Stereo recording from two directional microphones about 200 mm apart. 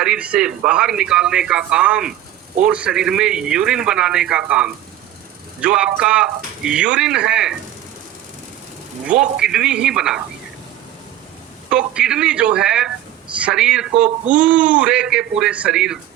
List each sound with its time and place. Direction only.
0.0 s speech: 5° right (ahead or behind)
9.4 s speech: 5° right (ahead or behind)
11.7 s speech: 5° right (ahead or behind)
14.0 s speech: 40° right (ahead or behind)
14.4 s speech: 5° right (ahead or behind)